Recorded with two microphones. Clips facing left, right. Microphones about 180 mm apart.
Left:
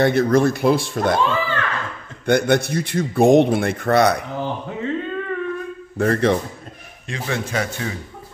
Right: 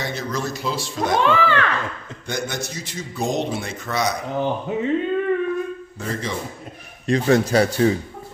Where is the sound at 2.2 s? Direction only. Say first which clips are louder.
Left 11 dB; 60° left (ahead or behind).